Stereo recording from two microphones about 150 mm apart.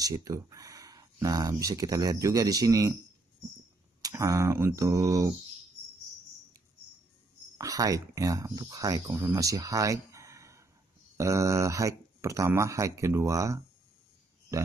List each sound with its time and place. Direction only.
0.0 s speech: 25° right (ahead or behind)
4.0 s speech: 20° right (ahead or behind)
7.5 s speech: 25° right (ahead or behind)